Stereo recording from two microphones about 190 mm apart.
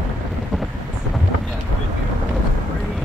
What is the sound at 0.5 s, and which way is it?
Vehicle, centre (ahead or behind).